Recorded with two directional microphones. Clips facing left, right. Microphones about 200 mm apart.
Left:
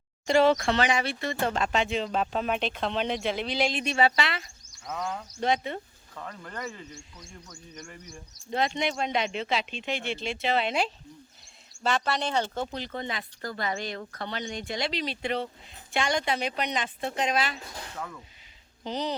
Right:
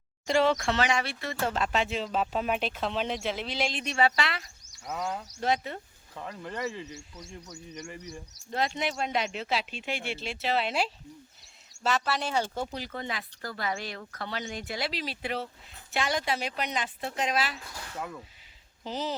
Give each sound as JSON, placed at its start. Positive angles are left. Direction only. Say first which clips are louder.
{"t": 0.7, "sound": "speech", "louder": "left 2 dB", "side_deg": 0}
{"t": 6.1, "sound": "a man's voice", "louder": "right 2 dB", "side_deg": -15}
{"t": 7.5, "sound": "a man's voice", "louder": "right 4 dB", "side_deg": -15}
{"t": 8.5, "sound": "speech", "louder": "left 2 dB", "side_deg": -5}
{"t": 18.9, "sound": "speech", "louder": "left 2 dB", "side_deg": -5}